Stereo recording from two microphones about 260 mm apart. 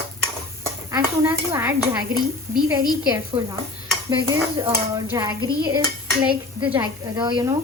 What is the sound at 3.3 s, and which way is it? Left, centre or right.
Dishes, right.